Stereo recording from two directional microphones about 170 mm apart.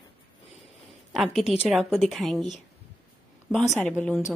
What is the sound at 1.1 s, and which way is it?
Speech, centre (ahead or behind).